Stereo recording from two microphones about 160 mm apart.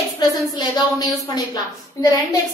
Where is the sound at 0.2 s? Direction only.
25° left (ahead or behind).